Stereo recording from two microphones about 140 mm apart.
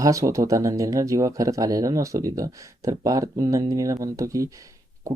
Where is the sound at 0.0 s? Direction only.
20° right (ahead or behind).